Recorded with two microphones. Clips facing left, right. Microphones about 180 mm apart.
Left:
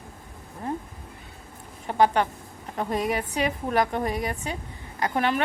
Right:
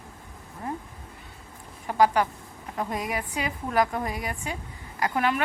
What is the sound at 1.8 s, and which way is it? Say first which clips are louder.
A woman's voice: even; 25° left (ahead or behind).